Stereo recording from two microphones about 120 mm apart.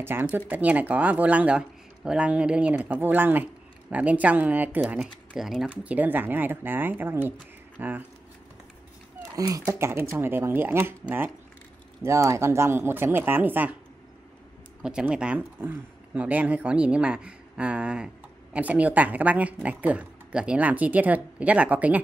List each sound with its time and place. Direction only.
0.0 s speech: 15° right (ahead or behind)
5.0 s speech: 5° right (ahead or behind)
5.9 s speech: 15° right (ahead or behind)
9.3 s speech: 30° right (ahead or behind); by 13.7 s 15° right (ahead or behind)
14.8 s speech: 5° right (ahead or behind)